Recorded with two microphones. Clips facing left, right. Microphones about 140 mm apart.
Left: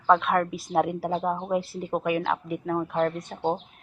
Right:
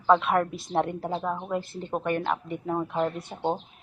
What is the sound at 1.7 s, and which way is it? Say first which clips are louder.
A woman's voice: left 2 dB; 5° left (ahead or behind).